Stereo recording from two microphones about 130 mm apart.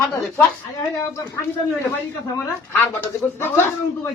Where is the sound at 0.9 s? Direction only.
25° left (ahead or behind).